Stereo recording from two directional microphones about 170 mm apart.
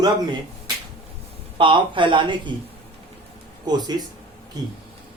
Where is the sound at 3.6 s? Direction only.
25° right (ahead or behind).